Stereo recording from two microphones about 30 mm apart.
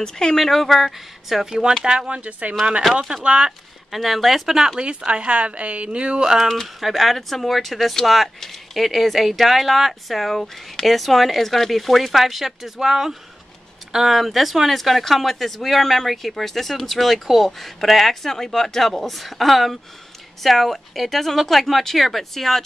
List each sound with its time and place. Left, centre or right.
0.0 s speech: centre
0.5 s speech: centre
1.3 s speech: centre
2.0 s a woman's voice: right
3.3 s speech: right
3.9 s speech: centre
4.7 s a woman's voice: right
5.9 s a sound: right
6.2 s speech: centre
6.8 s speech: centre
18.3 s speech: centre